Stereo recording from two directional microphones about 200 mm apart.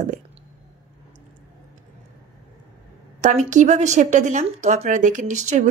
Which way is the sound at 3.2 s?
35° right (ahead or behind).